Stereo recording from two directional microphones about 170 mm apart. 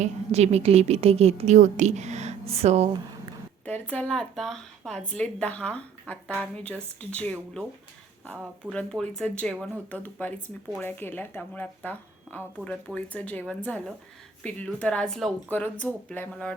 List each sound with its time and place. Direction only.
0.0 s a woman's voice: 40° right (ahead or behind)
3.7 s speech: 10° left (ahead or behind)
8.7 s speech: 5° left (ahead or behind)